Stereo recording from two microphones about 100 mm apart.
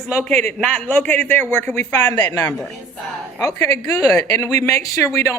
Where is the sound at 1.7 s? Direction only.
35° left (ahead or behind).